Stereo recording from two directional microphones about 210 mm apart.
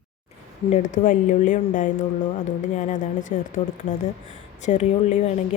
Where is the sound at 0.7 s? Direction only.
35° left (ahead or behind).